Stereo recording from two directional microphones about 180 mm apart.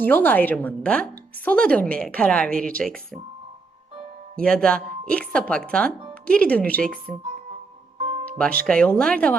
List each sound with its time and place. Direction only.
0.0 s speech: 10° left (ahead or behind)
4.4 s speech: 5° left (ahead or behind)
7.9 s music: 35° right (ahead or behind)
8.6 s speech: 5° left (ahead or behind)